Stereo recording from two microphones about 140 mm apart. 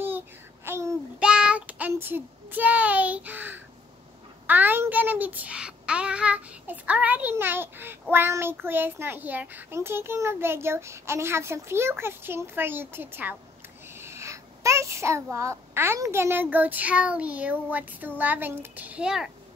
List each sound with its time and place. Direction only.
0.7 s child singing: 20° right (ahead or behind)
1.2 s child singing: 5° right (ahead or behind)
4.5 s a child's voice: 15° right (ahead or behind)
13.9 s a sound: 20° right (ahead or behind)
15.3 s a child's voice: 20° right (ahead or behind)